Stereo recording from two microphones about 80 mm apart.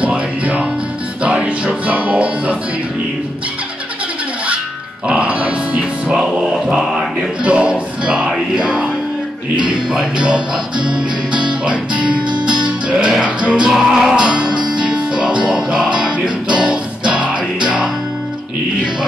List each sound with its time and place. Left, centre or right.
0.0 s music: centre
5.0 s music: centre
11.6 s music: centre
14.5 s music: right
14.8 s music: centre